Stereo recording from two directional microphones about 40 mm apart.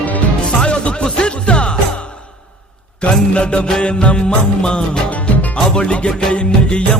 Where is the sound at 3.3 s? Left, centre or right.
Left.